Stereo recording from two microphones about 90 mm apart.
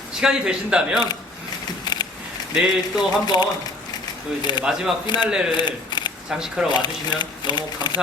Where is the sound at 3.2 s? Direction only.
50° left (ahead or behind).